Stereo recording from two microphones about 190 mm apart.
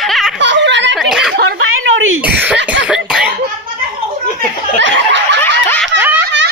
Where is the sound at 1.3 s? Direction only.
90° right.